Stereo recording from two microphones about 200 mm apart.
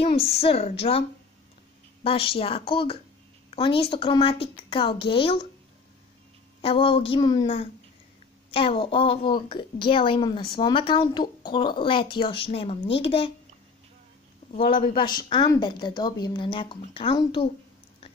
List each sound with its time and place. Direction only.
0.0 s a woman's voice: 30° left (ahead or behind)
2.0 s a woman's voice: 30° left (ahead or behind)
6.6 s a woman's voice: 30° left (ahead or behind)
15.0 s a woman's voice: 25° left (ahead or behind)